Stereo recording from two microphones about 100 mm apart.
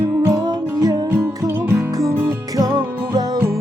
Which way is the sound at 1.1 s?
30° right (ahead or behind).